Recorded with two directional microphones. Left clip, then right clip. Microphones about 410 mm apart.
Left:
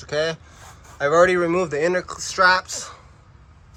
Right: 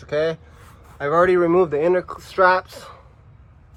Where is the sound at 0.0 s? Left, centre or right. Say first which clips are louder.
Right 2 dB; centre.